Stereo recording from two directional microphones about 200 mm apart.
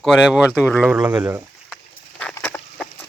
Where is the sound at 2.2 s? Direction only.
5° left (ahead or behind).